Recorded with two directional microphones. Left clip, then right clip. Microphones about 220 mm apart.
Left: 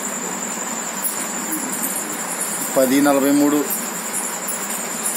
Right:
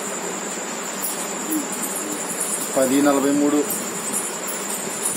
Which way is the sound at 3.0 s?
30° left (ahead or behind).